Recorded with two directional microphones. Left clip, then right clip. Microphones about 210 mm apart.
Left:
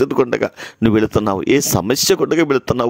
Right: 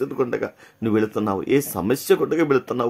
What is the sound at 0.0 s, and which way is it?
Speech, 40° left (ahead or behind).